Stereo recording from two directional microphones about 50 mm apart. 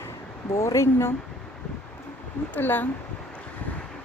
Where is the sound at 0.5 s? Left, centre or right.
Left.